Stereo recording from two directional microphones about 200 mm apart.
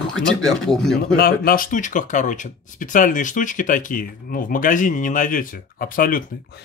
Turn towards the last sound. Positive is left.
turn(degrees=45)  # may be behind; listen again after turning